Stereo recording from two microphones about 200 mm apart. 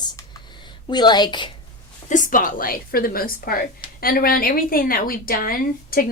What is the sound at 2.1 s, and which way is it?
A woman's voice, 40° left (ahead or behind).